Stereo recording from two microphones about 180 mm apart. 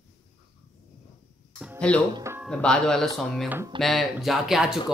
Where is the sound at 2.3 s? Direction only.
15° right (ahead or behind).